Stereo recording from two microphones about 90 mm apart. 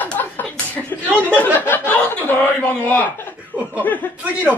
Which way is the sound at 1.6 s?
25° left (ahead or behind).